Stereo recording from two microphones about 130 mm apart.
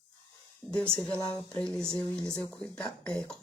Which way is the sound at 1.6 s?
5° left (ahead or behind).